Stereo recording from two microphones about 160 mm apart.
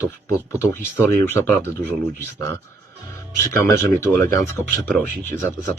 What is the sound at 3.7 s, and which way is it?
Speech, 15° left (ahead or behind).